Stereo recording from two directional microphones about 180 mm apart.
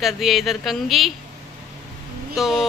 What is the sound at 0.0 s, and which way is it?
Speech, centre (ahead or behind).